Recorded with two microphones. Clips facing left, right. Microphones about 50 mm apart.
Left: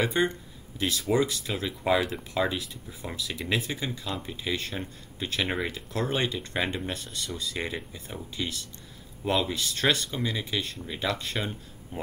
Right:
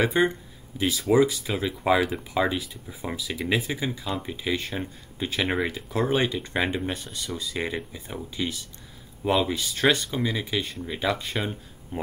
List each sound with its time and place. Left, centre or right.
0.0 s speech: centre